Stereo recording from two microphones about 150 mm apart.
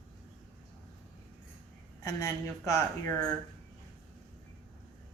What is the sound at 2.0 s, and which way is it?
Speech, 20° left (ahead or behind).